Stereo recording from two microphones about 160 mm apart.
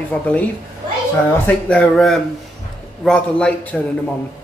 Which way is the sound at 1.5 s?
5° left (ahead or behind).